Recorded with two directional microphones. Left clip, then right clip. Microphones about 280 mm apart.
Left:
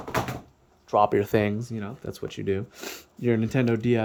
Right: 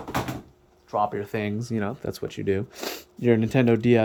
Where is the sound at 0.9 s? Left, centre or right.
Left.